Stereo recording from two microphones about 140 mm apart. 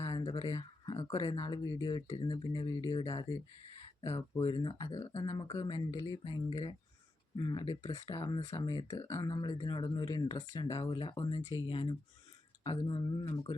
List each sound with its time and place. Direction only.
0.0 s speech: 35° left (ahead or behind)
7.6 s speech: 45° left (ahead or behind)
8.1 s speech: 35° left (ahead or behind)